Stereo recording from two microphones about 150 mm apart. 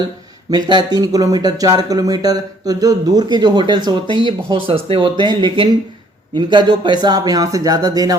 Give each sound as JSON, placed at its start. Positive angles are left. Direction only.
{"t": 0.5, "sound": "speech", "side_deg": -30}
{"t": 4.0, "sound": "speech", "side_deg": 30}
{"t": 4.3, "sound": "speech", "side_deg": -35}